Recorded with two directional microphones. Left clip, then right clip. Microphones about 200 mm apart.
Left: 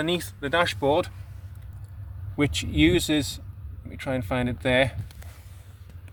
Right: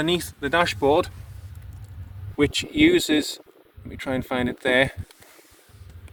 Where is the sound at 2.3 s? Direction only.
15° right (ahead or behind).